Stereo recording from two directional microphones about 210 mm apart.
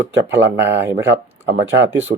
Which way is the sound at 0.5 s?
10° right (ahead or behind).